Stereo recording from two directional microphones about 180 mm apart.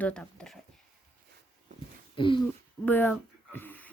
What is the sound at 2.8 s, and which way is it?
Speech, 10° left (ahead or behind).